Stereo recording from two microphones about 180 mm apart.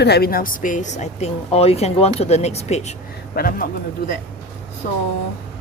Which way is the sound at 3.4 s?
55° left (ahead or behind).